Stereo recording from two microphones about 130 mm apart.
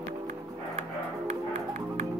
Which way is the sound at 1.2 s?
70° right (ahead or behind).